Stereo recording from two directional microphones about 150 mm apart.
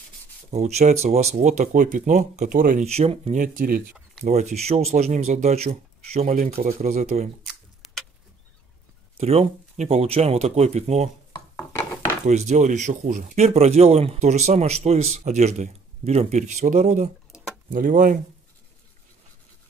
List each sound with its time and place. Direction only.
0.5 s speech: 45° right (ahead or behind); by 2.8 s 65° right (ahead or behind)
2.8 s speech: 45° right (ahead or behind)
3.3 s speech: 60° right (ahead or behind)
4.2 s speech: 50° right (ahead or behind)
9.2 s speech: 45° right (ahead or behind)
11.5 s a sound: 15° left (ahead or behind)
12.3 s speech: 50° right (ahead or behind)
17.6 s speech: 65° right (ahead or behind)